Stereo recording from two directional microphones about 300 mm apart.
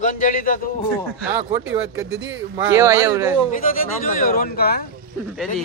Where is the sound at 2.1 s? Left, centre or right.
Right.